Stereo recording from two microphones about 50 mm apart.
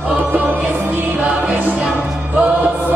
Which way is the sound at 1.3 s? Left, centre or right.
Right.